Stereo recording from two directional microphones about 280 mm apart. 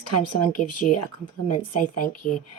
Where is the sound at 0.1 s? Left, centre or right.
Left.